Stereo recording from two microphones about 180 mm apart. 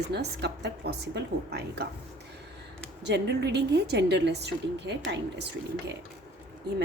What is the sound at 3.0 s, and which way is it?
A woman's voice, 70° right (ahead or behind).